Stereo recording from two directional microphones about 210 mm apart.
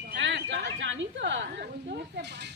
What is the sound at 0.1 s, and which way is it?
A woman's voice, 60° right (ahead or behind).